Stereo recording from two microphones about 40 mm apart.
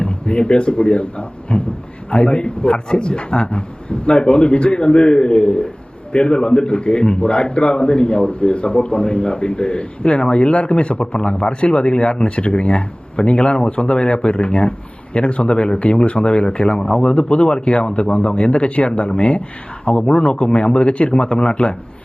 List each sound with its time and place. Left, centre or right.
0.0 s a man's voice: left